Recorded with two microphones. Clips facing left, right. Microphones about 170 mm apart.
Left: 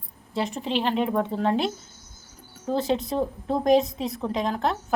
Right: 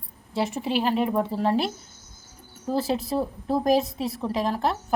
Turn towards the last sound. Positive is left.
turn(degrees=-5)  # may be behind; listen again after turning